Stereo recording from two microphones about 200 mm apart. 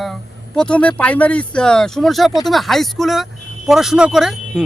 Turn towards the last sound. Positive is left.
turn(degrees=0)  # may be behind; listen again after turning